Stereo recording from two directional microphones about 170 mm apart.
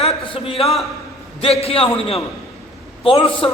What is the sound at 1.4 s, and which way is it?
Speech, 35° left (ahead or behind).